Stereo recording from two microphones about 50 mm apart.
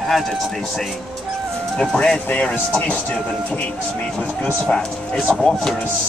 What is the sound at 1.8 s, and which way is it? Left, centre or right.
Speech, centre.